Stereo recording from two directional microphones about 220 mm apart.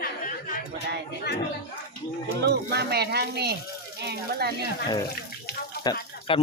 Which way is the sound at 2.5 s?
45° right (ahead or behind).